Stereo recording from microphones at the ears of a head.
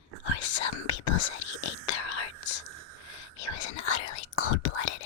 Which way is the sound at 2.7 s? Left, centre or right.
Right.